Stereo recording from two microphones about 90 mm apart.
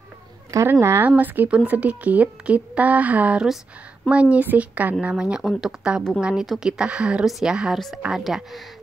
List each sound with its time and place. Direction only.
0.7 s a woman's voice: 25° right (ahead or behind); by 8.6 s 5° right (ahead or behind)